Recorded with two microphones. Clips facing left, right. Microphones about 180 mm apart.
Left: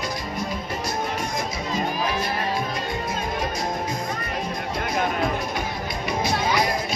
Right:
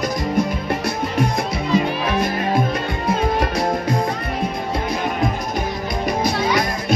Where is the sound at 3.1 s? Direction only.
65° right (ahead or behind).